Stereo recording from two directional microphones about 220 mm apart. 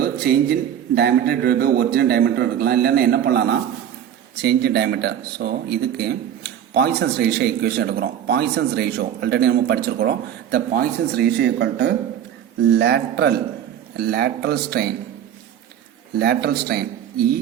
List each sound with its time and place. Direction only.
0.0 s speech: 45° right (ahead or behind)
16.1 s speech: 45° right (ahead or behind)